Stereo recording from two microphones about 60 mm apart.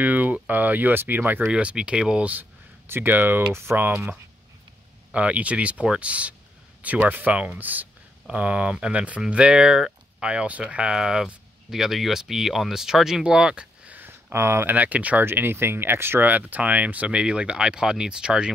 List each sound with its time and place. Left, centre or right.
0.0 s speech: right
1.5 s speech: centre
2.9 s speech: right
5.1 s speech: right
10.2 s speech: centre
11.0 s speech: centre
13.8 s a sound: right
14.3 s speech: right
14.7 s speech: right
15.2 s speech: right
16.3 s speech: right